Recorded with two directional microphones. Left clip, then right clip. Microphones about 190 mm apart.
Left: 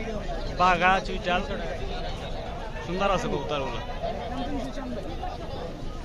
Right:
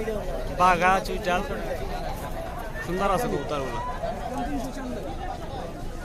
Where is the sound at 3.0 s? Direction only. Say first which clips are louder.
Right 1 dB; 10° right (ahead or behind).